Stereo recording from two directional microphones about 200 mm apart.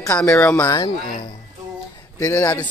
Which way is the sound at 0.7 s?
20° left (ahead or behind).